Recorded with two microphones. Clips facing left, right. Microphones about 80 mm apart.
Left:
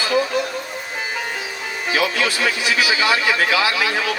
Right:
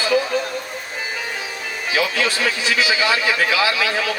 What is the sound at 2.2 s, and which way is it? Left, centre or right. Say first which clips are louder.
Speech: even; right.